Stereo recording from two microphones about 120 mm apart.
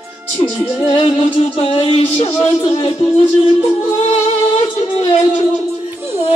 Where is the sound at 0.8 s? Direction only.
45° left (ahead or behind); by 2.4 s 60° left (ahead or behind).